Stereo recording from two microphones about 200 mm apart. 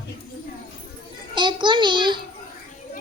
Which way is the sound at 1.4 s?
25° right (ahead or behind).